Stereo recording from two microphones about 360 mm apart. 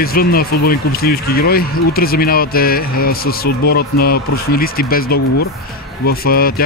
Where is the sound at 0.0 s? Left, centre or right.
Left.